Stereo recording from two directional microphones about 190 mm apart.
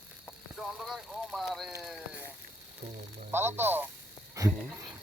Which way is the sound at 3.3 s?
10° right (ahead or behind).